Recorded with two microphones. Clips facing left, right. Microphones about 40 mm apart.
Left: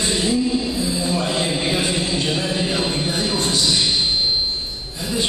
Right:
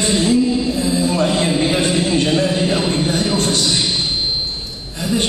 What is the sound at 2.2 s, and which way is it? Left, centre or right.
Speech, right.